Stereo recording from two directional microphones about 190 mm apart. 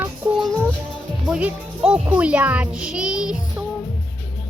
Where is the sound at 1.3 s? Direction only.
5° right (ahead or behind).